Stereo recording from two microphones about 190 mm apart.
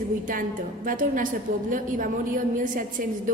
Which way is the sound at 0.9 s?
45° right (ahead or behind).